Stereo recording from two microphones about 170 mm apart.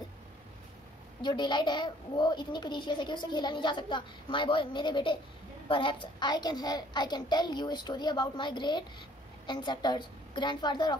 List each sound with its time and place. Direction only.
1.2 s a woman's voice: 25° left (ahead or behind)